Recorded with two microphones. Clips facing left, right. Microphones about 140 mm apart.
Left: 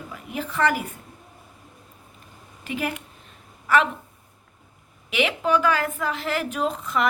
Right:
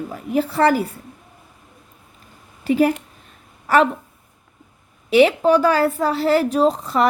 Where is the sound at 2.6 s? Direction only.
35° right (ahead or behind).